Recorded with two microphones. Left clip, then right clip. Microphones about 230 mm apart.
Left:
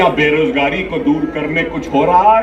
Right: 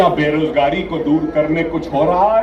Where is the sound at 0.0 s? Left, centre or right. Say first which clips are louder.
Left 2 dB; right.